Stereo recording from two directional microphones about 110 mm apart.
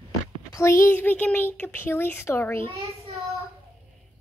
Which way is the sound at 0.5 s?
25° left (ahead or behind).